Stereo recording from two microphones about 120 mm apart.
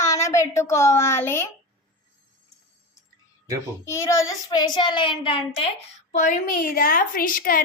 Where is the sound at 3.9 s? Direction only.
25° left (ahead or behind); by 5.7 s 45° left (ahead or behind).